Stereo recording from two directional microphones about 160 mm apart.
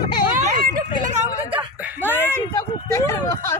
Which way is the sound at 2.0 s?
15° left (ahead or behind).